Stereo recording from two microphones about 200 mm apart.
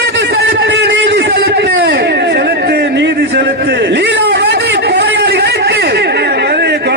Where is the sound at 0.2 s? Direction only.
55° right (ahead or behind).